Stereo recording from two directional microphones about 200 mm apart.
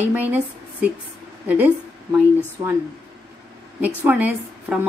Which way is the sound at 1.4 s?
10° right (ahead or behind).